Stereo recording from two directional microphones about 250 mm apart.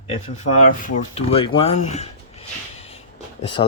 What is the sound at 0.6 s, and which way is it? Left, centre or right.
Speech, left.